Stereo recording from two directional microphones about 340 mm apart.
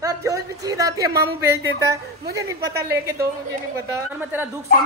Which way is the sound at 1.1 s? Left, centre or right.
Right.